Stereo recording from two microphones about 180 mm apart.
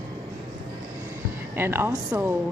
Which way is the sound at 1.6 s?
15° right (ahead or behind).